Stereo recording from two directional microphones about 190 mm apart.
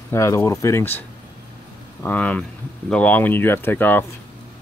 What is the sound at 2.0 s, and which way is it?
Speech, 10° left (ahead or behind).